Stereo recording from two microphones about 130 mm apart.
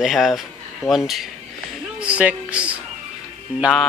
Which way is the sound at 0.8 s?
25° left (ahead or behind).